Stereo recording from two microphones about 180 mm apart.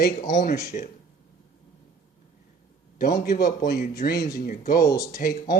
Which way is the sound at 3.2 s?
55° left (ahead or behind).